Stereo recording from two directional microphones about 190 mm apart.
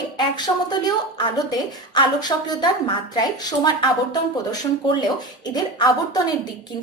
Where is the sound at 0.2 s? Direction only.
20° left (ahead or behind).